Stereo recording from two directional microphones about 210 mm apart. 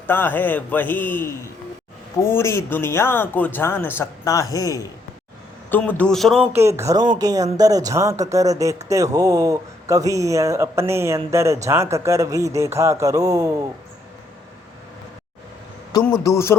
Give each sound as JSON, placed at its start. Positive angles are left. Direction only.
{"t": 0.1, "sound": "speech", "side_deg": 10}
{"t": 16.2, "sound": "speech", "side_deg": 15}